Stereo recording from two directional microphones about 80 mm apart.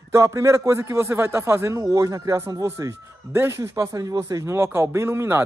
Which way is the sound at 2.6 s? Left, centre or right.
Right.